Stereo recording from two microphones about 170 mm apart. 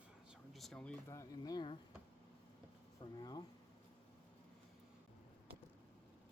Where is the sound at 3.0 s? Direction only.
25° left (ahead or behind).